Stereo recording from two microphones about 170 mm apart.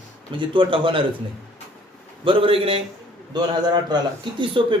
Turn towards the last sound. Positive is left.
turn(degrees=-30)  # may be behind; listen again after turning